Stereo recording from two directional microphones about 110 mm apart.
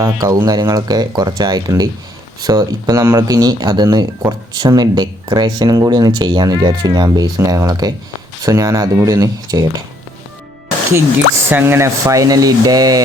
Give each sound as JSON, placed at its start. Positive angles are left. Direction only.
{"t": 0.0, "sound": "speech", "side_deg": -30}
{"t": 6.1, "sound": "speech", "side_deg": -45}
{"t": 11.4, "sound": "speech", "side_deg": -20}